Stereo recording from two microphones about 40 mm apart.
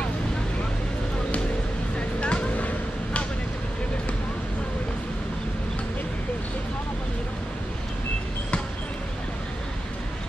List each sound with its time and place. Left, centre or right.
2.0 s vehicle: left